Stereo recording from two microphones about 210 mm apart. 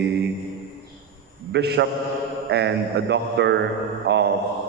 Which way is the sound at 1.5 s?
55° right (ahead or behind).